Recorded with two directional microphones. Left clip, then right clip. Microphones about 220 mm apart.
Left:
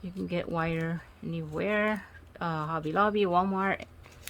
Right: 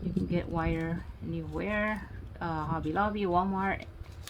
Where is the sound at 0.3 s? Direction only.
40° left (ahead or behind).